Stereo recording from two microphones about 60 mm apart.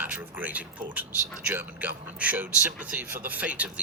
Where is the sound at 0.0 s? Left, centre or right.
Right.